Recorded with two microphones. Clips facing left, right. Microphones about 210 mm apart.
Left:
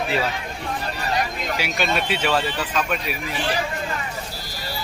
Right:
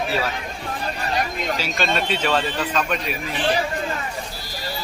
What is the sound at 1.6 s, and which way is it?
Speech, 10° left (ahead or behind).